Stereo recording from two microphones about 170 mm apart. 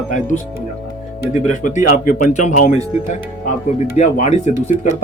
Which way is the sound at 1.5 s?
45° left (ahead or behind).